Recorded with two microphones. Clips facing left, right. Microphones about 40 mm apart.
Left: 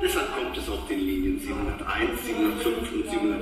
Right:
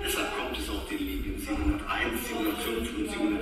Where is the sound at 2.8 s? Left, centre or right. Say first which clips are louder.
Left 3 dB; left.